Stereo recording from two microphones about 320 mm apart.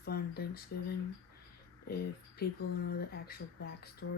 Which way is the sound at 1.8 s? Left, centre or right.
Left.